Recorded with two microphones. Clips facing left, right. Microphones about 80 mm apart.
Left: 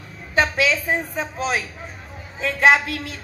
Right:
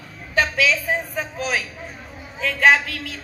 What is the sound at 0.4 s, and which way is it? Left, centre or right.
A man's voice, left.